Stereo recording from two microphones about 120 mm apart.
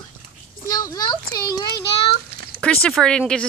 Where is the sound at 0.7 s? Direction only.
30° left (ahead or behind).